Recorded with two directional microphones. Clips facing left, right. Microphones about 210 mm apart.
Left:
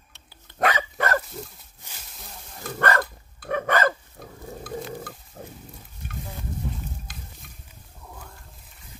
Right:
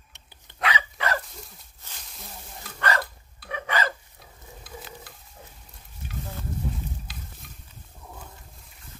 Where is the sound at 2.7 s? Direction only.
50° left (ahead or behind).